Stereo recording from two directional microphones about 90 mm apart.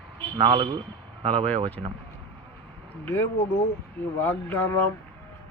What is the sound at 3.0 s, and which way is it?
Speech, 25° left (ahead or behind).